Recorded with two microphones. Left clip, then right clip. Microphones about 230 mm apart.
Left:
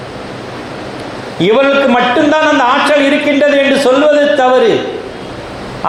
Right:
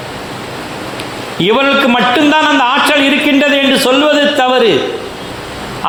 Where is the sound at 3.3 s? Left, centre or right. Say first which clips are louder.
Left 1 dB; right.